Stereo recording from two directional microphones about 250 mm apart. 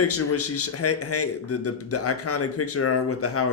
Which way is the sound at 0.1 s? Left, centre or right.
Left.